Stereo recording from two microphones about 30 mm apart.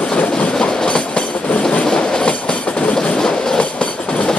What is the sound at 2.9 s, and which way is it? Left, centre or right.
Train, left.